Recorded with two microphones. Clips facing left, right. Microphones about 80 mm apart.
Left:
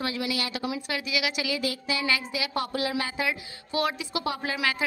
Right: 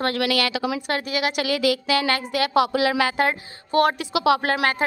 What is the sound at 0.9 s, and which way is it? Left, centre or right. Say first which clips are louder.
A woman's voice: right 6 dB; right.